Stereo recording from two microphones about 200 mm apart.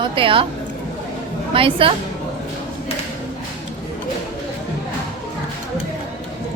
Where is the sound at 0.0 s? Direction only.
25° right (ahead or behind).